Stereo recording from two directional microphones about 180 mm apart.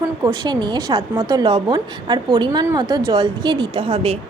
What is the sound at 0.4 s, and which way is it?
A woman's voice, 25° right (ahead or behind).